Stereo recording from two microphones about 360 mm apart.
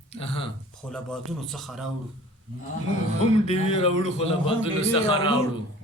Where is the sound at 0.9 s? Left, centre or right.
Centre.